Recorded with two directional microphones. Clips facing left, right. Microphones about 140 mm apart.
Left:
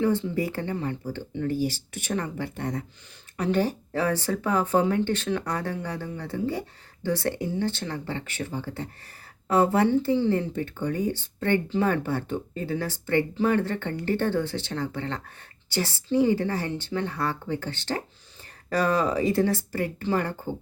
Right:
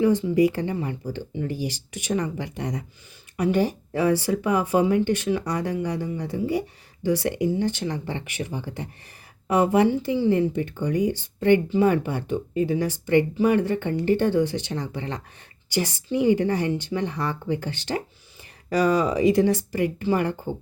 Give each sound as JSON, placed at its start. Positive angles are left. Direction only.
{"t": 0.0, "sound": "speech", "side_deg": -15}